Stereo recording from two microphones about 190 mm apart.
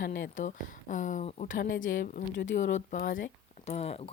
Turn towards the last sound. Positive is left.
turn(degrees=30)  # may be behind; listen again after turning